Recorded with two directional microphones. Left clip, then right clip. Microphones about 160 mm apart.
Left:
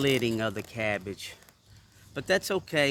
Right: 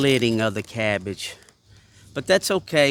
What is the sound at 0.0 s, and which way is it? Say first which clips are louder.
Speech: right 7 dB; 75° right (ahead or behind).